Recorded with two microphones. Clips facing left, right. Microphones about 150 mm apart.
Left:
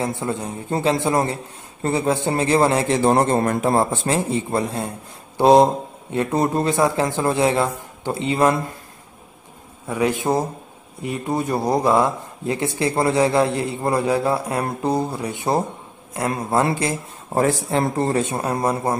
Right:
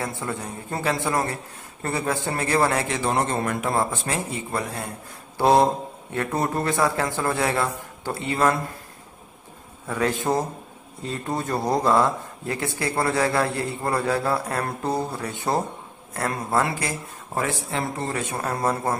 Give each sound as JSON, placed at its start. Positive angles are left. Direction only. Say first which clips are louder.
{"t": 0.0, "sound": "a man's voice", "louder": "left 5 dB", "side_deg": 20}
{"t": 9.8, "sound": "a man's voice", "louder": "left 3 dB", "side_deg": 15}
{"t": 18.2, "sound": "a man's voice", "louder": "left 4 dB", "side_deg": 20}